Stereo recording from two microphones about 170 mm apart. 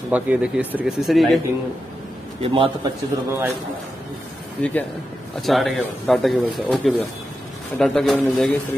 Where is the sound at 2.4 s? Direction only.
30° right (ahead or behind).